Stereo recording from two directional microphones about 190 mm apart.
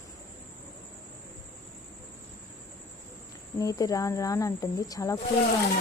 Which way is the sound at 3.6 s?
20° left (ahead or behind).